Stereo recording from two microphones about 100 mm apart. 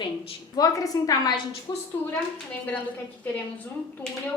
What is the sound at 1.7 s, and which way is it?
Speech, 50° left (ahead or behind).